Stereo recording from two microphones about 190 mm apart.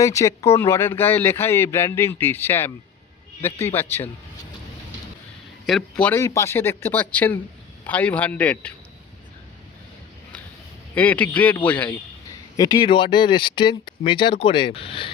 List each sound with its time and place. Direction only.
0.0 s speech: 15° left (ahead or behind)
5.6 s speech: 5° left (ahead or behind)
10.9 s speech: 10° left (ahead or behind)
12.5 s speech: 20° left (ahead or behind)